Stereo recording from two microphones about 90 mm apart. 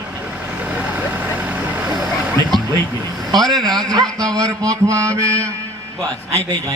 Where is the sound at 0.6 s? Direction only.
15° right (ahead or behind).